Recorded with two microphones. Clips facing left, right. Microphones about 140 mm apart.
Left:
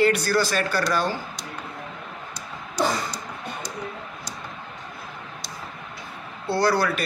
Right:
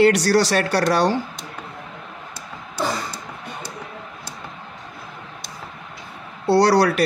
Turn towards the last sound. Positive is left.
turn(degrees=-75)  # may be behind; listen again after turning